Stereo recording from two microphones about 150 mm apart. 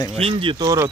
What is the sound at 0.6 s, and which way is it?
Speech, 20° right (ahead or behind).